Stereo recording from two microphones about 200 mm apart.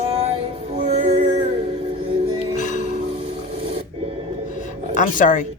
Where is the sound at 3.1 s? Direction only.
30° right (ahead or behind).